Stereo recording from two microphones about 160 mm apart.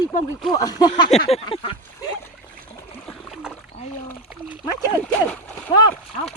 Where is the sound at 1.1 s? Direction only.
40° left (ahead or behind).